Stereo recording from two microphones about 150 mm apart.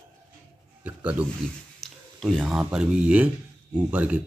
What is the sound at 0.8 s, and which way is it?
Speech, 10° right (ahead or behind).